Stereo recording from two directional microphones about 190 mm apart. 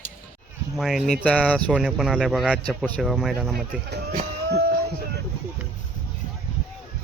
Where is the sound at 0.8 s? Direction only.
Centre (ahead or behind).